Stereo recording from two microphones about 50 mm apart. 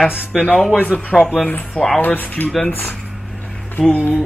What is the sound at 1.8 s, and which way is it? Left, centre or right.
Speech, centre.